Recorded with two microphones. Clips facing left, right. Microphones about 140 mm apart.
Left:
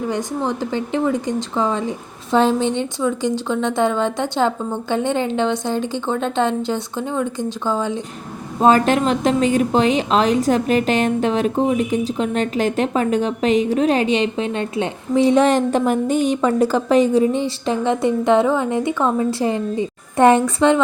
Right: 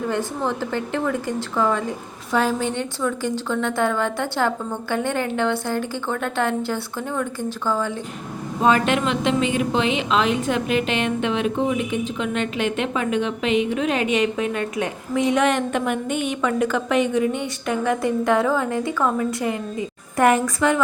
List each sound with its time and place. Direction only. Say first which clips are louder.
0.1 s a woman's voice: left 2 dB; 15° left (ahead or behind)
8.6 s a woman's voice: left 4 dB; 35° left (ahead or behind)